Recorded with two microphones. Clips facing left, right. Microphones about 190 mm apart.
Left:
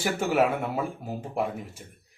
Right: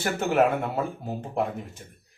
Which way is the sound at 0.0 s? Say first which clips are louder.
Right 1 dB; 5° left (ahead or behind).